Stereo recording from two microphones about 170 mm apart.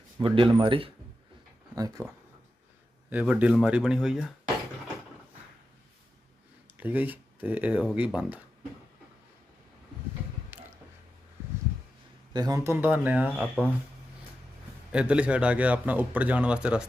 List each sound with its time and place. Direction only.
0.2 s speech: 30° right (ahead or behind)
1.7 s speech: 20° right (ahead or behind)
3.1 s a man's voice: 10° right (ahead or behind)
6.7 s a man's voice: 10° right (ahead or behind)
10.5 s a sound: 15° right (ahead or behind)
12.3 s a man's voice: 20° right (ahead or behind)
14.9 s a man's voice: 5° right (ahead or behind)